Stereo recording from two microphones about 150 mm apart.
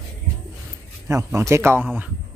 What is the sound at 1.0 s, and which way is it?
Speech, 20° right (ahead or behind).